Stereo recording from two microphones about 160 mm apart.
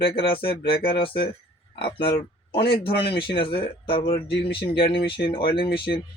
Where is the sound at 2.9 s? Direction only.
90° left.